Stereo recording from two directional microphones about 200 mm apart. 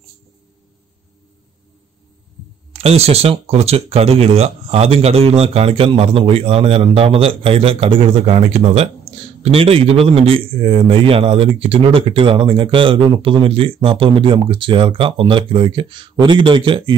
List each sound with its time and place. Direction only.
2.7 s a man's voice: 30° right (ahead or behind)